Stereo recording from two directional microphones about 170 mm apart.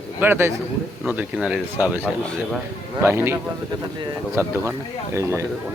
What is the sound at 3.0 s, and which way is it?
Speech, 15° right (ahead or behind).